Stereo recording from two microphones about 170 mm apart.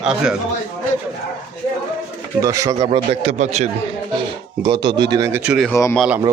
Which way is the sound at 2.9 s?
35° right (ahead or behind).